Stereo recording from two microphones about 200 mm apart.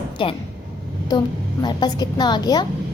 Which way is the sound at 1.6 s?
20° left (ahead or behind).